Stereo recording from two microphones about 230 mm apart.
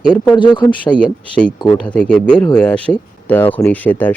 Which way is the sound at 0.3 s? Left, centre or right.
Centre.